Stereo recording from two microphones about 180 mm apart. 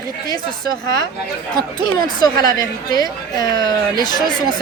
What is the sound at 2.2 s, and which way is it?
A woman's voice, 20° left (ahead or behind).